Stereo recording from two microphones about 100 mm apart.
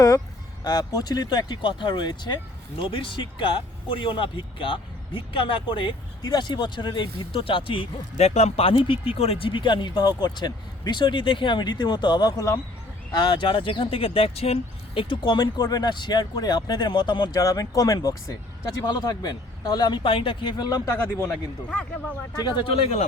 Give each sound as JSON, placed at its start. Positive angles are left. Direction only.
{"t": 0.6, "sound": "speech", "side_deg": 40}
{"t": 2.8, "sound": "speech", "side_deg": 60}
{"t": 13.2, "sound": "speech", "side_deg": 55}
{"t": 20.0, "sound": "speech", "side_deg": 60}
{"t": 21.2, "sound": "speech", "side_deg": 15}
{"t": 22.4, "sound": "speech", "side_deg": 50}
{"t": 22.7, "sound": "speech", "side_deg": 75}